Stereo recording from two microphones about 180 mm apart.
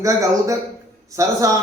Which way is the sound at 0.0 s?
15° right (ahead or behind).